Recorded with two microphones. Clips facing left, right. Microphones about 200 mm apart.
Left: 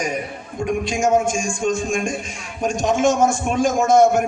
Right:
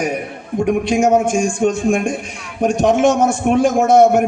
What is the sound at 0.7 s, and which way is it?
A man's voice, 60° right (ahead or behind).